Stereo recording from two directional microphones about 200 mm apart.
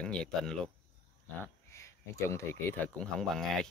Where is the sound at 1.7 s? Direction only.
15° left (ahead or behind).